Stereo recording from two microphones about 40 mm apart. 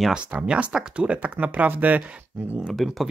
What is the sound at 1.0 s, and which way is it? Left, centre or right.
Speech, right.